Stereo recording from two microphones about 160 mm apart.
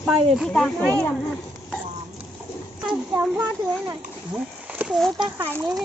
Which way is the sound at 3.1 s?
10° right (ahead or behind).